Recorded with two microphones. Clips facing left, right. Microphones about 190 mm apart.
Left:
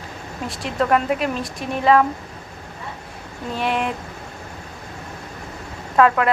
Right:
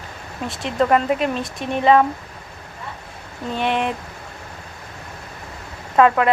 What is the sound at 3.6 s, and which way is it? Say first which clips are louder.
Speech: right 1 dB; centre (ahead or behind).